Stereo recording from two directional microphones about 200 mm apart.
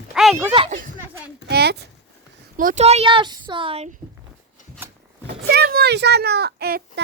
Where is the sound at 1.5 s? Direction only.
55° right (ahead or behind).